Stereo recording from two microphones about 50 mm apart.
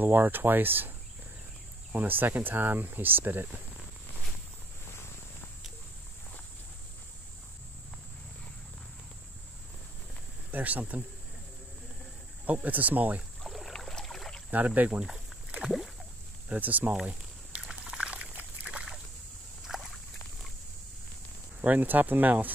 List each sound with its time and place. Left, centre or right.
0.0 s speech: right
2.0 s speech: right
10.5 s speech: right
12.6 s speech: right
13.4 s boat: centre
14.5 s speech: right
16.4 s speech: right
17.0 s a sound: right
18.2 s a sound: right
18.7 s a sound: centre
19.6 s a sound: centre
21.5 s speech: right